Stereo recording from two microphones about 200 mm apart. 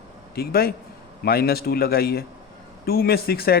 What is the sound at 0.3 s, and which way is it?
Speech, 50° left (ahead or behind).